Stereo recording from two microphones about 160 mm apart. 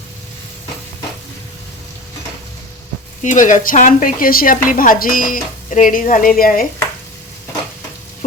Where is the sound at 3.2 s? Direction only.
50° left (ahead or behind).